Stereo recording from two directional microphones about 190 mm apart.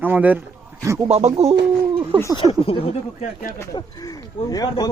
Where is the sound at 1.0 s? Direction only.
35° right (ahead or behind).